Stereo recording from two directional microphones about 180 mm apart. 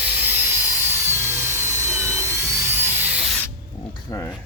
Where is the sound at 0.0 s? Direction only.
10° right (ahead or behind).